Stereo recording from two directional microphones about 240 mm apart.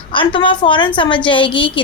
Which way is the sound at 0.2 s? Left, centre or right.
Left.